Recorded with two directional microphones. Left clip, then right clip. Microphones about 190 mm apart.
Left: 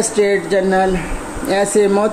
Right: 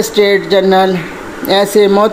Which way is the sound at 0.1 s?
20° right (ahead or behind).